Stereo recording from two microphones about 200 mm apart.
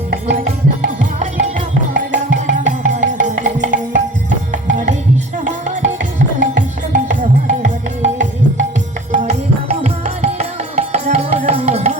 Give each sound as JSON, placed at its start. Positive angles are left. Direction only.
{"t": 0.3, "sound": "music", "side_deg": -40}